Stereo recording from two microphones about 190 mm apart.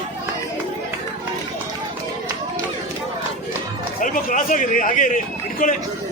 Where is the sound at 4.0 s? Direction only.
45° left (ahead or behind).